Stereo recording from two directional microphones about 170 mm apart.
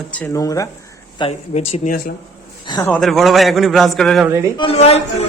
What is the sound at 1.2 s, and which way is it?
Speech, 40° left (ahead or behind).